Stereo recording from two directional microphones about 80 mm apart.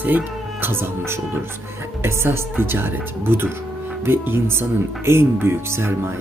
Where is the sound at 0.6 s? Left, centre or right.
Right.